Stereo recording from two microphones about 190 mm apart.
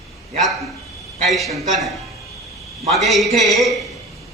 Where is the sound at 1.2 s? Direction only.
Centre (ahead or behind).